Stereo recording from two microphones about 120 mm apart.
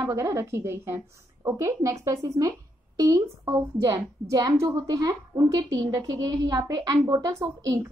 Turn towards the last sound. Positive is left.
turn(degrees=-25)  # may be behind; listen again after turning